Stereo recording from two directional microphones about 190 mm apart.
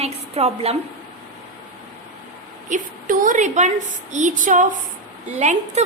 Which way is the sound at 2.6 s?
45° right (ahead or behind).